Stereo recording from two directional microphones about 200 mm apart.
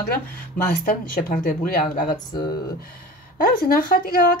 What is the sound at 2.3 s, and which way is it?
Speech, 20° left (ahead or behind).